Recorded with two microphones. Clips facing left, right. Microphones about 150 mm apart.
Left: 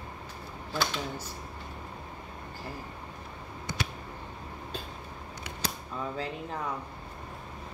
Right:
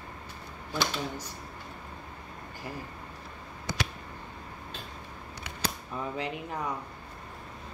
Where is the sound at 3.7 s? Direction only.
90° right.